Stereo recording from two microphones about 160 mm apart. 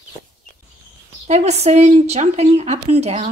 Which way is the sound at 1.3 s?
45° right (ahead or behind).